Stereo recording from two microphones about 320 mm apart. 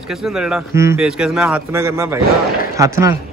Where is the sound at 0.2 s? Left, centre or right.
Centre.